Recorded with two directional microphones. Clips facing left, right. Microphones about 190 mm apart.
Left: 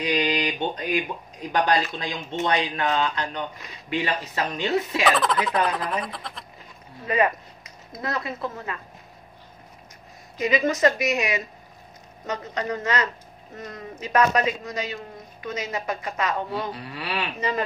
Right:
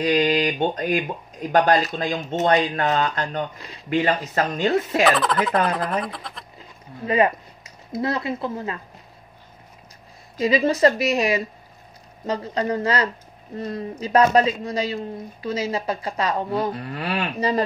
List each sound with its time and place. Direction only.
0.0 s speech: 50° right (ahead or behind)
5.0 s speech: centre (ahead or behind)
7.1 s speech: 25° right (ahead or behind)
10.4 s speech: 30° right (ahead or behind)
16.7 s speech: 50° right (ahead or behind)